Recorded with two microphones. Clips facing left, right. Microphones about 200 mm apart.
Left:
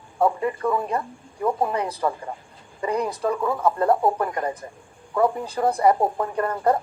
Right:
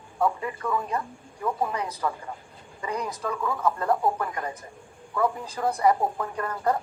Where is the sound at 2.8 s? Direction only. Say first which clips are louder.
Left 7 dB; 55° left (ahead or behind).